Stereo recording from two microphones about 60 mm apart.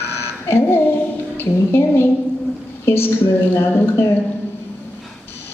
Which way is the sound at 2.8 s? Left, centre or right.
Left.